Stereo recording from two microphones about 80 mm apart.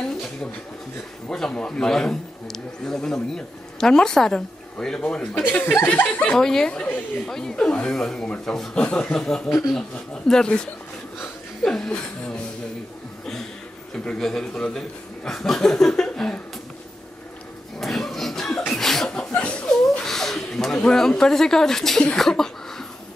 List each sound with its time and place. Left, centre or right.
1.3 s a woman's voice: centre
6.3 s a woman's voice: centre
13.9 s a woman's voice: centre
17.7 s a sound: centre
18.7 s chuckle: centre
20.0 s a sound: centre